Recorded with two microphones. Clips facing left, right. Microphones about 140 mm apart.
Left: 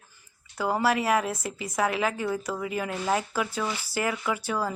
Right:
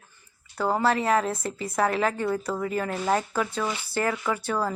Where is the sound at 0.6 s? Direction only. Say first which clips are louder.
Right 1 dB; 5° left (ahead or behind).